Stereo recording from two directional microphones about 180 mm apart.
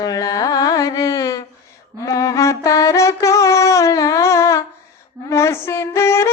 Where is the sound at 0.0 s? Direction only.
20° left (ahead or behind).